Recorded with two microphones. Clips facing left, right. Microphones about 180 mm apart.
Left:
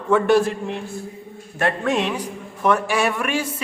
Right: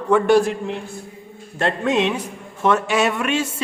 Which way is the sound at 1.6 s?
20° right (ahead or behind).